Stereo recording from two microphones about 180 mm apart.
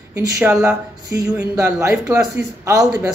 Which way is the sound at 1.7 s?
15° right (ahead or behind).